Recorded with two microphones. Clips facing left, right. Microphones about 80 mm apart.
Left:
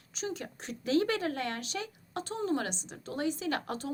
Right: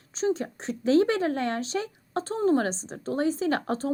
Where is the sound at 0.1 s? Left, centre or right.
Right.